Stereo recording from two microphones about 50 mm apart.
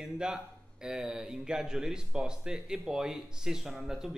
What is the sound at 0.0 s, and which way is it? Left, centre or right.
Speech, centre.